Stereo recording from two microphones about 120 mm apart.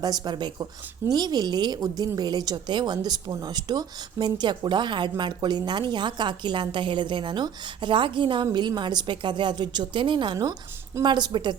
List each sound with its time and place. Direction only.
0.0 s speech: 35° right (ahead or behind)